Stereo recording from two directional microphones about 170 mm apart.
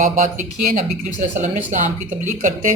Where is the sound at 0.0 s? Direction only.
50° right (ahead or behind).